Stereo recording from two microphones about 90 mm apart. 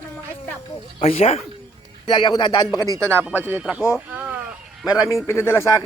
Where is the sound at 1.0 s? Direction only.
90° left.